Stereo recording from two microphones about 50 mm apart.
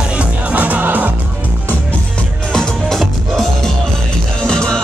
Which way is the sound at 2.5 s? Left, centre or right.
Centre.